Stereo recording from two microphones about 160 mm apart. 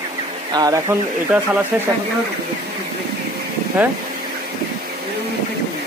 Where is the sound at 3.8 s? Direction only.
10° right (ahead or behind).